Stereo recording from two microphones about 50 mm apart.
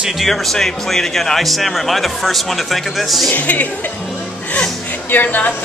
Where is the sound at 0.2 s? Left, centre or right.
Centre.